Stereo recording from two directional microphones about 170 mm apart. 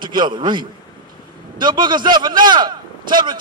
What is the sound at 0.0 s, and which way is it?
A man's voice, 25° right (ahead or behind).